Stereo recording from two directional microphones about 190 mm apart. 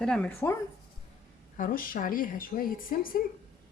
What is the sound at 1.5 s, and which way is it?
A woman's voice, 45° left (ahead or behind).